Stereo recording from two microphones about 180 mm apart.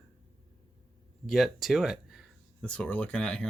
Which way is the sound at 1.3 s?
Centre (ahead or behind).